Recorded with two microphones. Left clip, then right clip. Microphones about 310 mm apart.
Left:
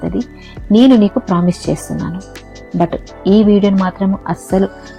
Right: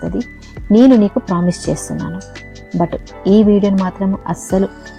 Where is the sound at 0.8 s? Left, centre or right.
Right.